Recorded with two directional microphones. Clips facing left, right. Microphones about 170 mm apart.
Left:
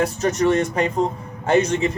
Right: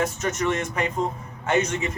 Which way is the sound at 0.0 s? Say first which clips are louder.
Left 6 dB; 35° left (ahead or behind).